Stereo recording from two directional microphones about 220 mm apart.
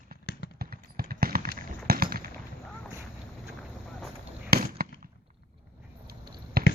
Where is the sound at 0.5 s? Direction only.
45° right (ahead or behind).